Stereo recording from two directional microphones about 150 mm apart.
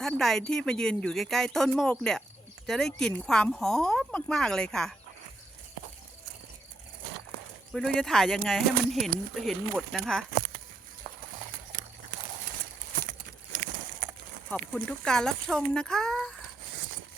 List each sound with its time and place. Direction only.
0.0 s speech: centre (ahead or behind)
7.7 s speech: 5° left (ahead or behind)
13.1 s a sound: 65° right (ahead or behind)
14.5 s speech: 5° left (ahead or behind)